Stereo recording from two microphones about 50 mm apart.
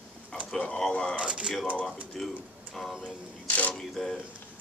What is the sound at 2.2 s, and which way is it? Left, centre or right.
Speech, centre.